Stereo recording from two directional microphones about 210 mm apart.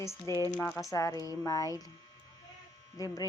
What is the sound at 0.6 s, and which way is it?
Speech, centre (ahead or behind).